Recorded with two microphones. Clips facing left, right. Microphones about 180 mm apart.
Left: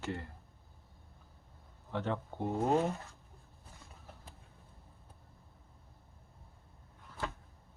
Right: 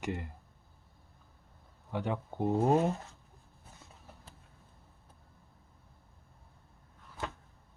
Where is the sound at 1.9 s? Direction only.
15° right (ahead or behind).